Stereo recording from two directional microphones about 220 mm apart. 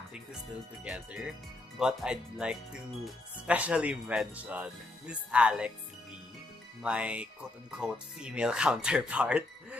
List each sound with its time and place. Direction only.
0.8 s speech: 5° right (ahead or behind)
6.8 s speech: 5° right (ahead or behind)